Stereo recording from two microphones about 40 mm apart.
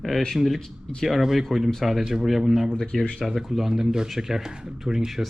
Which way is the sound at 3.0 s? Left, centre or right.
Left.